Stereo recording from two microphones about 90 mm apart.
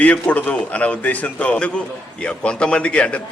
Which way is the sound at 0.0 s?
15° left (ahead or behind).